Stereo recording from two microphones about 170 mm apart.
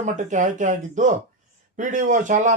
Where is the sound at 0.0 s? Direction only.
45° right (ahead or behind).